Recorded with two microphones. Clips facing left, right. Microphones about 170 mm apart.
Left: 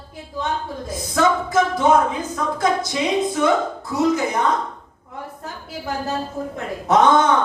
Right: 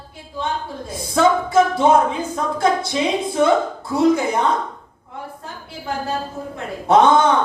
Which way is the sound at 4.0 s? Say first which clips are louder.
Right 3 dB; 30° right (ahead or behind).